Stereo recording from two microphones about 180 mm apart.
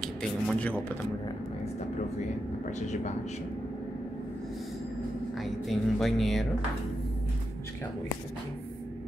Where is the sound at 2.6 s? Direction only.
40° left (ahead or behind).